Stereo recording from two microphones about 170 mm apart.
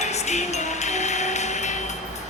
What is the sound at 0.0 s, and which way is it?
Music, 40° left (ahead or behind).